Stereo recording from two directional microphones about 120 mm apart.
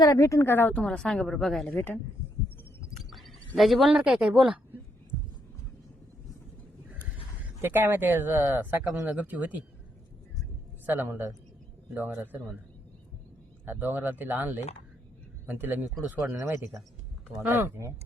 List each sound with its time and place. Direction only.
0.0 s a woman's voice: 30° left (ahead or behind); by 1.7 s centre (ahead or behind)
3.1 s a woman's voice: centre (ahead or behind)
7.6 s speech: 20° right (ahead or behind)
10.8 s speech: 20° right (ahead or behind)
13.7 s speech: 15° right (ahead or behind)
17.5 s speech: 20° right (ahead or behind)